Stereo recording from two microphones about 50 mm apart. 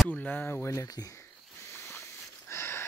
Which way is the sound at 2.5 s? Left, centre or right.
Left.